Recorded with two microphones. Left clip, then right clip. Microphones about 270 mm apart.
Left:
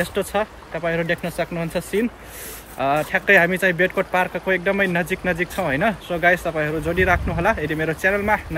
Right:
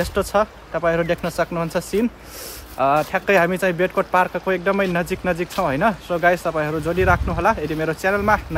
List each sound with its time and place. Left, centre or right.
0.0 s speech: centre